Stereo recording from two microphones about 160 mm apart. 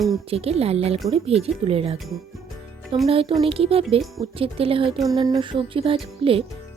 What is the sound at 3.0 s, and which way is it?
Music, 35° right (ahead or behind).